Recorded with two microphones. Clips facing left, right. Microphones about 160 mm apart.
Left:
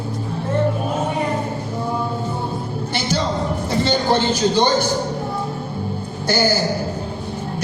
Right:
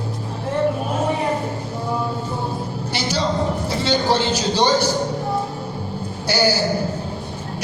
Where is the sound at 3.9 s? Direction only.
50° left (ahead or behind).